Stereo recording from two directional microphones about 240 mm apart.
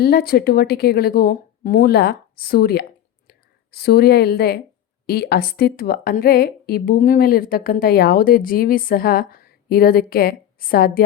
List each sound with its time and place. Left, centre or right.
0.0 s a woman's voice: left